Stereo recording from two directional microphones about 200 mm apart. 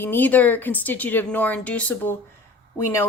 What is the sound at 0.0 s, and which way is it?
A woman's voice, 10° left (ahead or behind).